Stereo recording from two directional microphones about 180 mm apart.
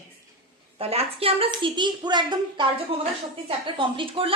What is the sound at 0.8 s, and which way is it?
A woman's voice, 35° right (ahead or behind).